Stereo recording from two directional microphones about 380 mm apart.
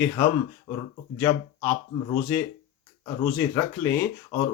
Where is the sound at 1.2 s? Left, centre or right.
Centre.